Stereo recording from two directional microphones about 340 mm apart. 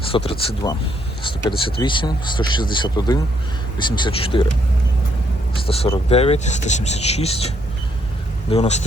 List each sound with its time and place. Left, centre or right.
0.1 s speech: centre
5.6 s speech: centre